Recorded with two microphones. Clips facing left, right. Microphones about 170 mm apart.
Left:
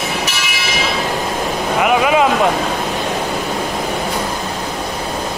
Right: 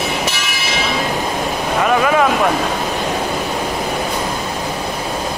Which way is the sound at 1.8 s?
15° left (ahead or behind).